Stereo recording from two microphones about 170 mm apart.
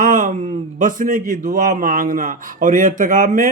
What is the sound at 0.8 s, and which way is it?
A man's voice, 50° right (ahead or behind).